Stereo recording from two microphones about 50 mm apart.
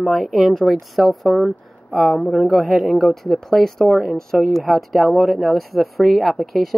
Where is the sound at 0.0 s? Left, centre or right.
Centre.